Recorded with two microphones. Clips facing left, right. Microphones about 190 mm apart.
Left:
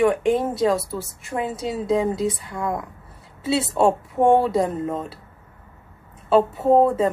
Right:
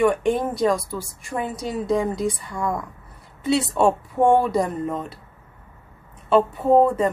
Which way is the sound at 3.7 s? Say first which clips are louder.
Even; 20° left (ahead or behind).